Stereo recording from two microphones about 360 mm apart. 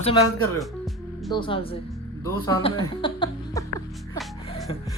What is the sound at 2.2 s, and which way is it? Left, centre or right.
Speech, centre.